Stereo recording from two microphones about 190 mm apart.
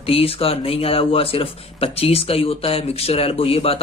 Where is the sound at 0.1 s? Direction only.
30° left (ahead or behind).